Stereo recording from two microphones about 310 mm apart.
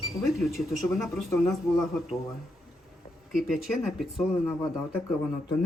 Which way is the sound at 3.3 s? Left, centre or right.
Centre.